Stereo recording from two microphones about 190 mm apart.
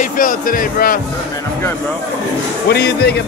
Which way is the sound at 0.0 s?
45° left (ahead or behind).